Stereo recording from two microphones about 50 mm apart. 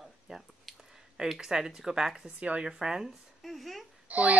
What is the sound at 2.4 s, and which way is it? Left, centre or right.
Speech, right.